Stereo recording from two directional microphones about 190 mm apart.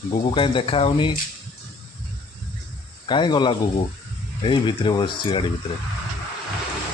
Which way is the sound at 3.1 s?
25° left (ahead or behind).